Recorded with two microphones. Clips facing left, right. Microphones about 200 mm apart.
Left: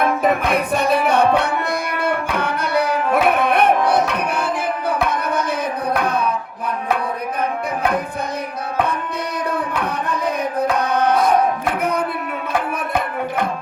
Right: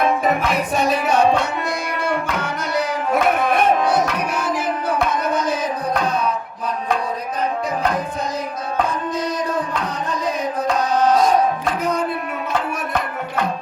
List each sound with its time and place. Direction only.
0.2 s music: 60° left (ahead or behind)
2.0 s tabla: 60° left (ahead or behind)
5.1 s a sound: 60° left (ahead or behind)
9.7 s music: 60° left (ahead or behind)